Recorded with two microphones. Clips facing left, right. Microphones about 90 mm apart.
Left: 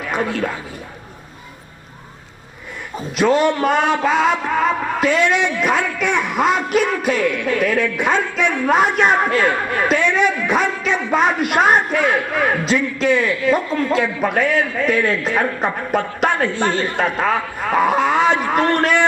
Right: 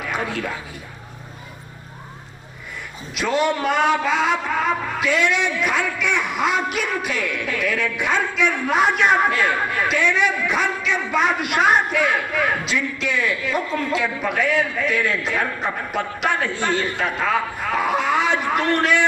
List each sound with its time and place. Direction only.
3.2 s music: 40° left (ahead or behind)
15.9 s a woman's voice: 45° left (ahead or behind)